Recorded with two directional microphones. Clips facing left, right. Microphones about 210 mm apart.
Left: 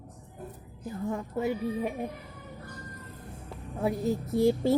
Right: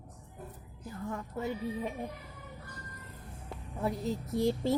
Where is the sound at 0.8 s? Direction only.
25° left (ahead or behind).